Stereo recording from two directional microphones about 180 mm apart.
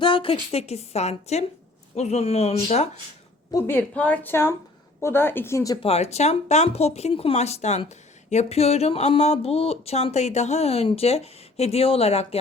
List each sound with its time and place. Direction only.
0.0 s speech: 30° left (ahead or behind)
3.5 s speech: 10° left (ahead or behind)
5.8 s speech: 35° left (ahead or behind)